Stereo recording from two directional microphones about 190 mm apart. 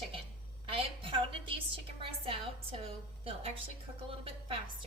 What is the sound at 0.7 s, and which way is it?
A woman's voice, 30° right (ahead or behind).